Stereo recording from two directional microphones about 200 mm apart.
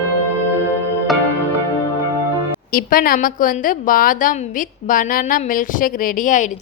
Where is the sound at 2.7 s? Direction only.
45° left (ahead or behind).